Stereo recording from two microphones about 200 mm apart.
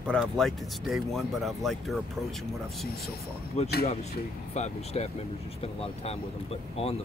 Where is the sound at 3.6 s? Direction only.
35° left (ahead or behind).